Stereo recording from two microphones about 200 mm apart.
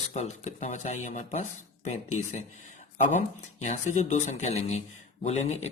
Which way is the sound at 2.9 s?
40° left (ahead or behind).